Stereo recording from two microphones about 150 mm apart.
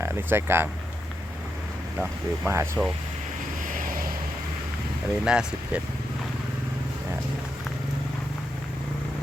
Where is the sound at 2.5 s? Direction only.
15° right (ahead or behind).